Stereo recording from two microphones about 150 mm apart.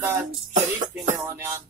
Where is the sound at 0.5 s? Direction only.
55° right (ahead or behind).